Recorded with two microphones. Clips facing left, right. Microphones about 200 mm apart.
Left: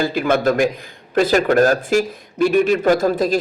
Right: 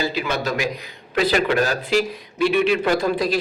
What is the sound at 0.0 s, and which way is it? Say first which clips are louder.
Speech: left 7 dB; 50° left (ahead or behind).